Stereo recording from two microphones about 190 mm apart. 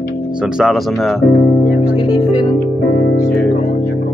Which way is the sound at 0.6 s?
Centre (ahead or behind).